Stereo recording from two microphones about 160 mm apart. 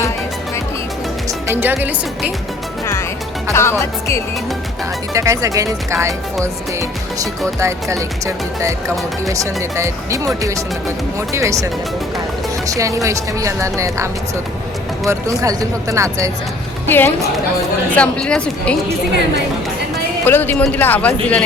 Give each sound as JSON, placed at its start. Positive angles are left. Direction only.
{"t": 1.5, "sound": "speech", "side_deg": -10}
{"t": 3.5, "sound": "speech", "side_deg": 15}
{"t": 5.1, "sound": "speech", "side_deg": -20}
{"t": 7.6, "sound": "speech", "side_deg": -20}
{"t": 9.3, "sound": "speech", "side_deg": -20}
{"t": 16.8, "sound": "speech", "side_deg": 10}
{"t": 20.2, "sound": "speech", "side_deg": 15}